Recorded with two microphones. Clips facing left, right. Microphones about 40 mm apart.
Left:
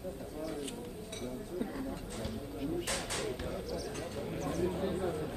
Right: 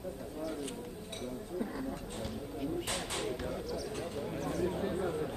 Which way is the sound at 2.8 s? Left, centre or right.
Right.